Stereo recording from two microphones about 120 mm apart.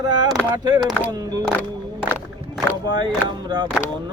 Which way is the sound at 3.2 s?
35° right (ahead or behind).